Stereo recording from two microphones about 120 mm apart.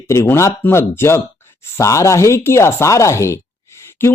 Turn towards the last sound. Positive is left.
turn(degrees=20)  # may be behind; listen again after turning